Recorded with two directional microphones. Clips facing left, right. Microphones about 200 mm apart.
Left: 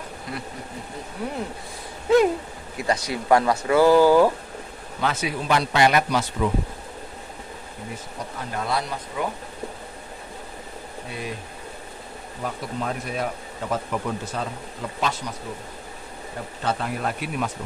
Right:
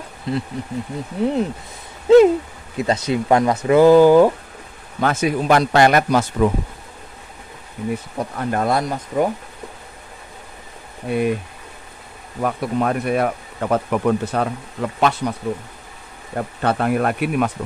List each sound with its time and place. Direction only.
0.3 s speech: 25° right (ahead or behind)
2.1 s owl: 25° right (ahead or behind)
2.8 s speech: 20° right (ahead or behind)
5.0 s a man's voice: 50° right (ahead or behind)
8.2 s a man's voice: 55° right (ahead or behind)
11.1 s speech: 60° right (ahead or behind)
12.4 s speech: 65° right (ahead or behind)
16.3 s speech: 60° right (ahead or behind)